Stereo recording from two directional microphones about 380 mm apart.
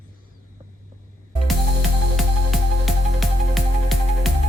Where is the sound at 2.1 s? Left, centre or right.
Centre.